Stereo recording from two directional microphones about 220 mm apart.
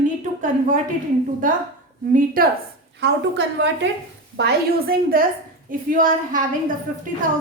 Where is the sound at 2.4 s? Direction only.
40° right (ahead or behind).